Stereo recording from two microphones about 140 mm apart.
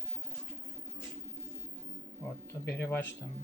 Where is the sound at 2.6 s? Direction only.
15° left (ahead or behind).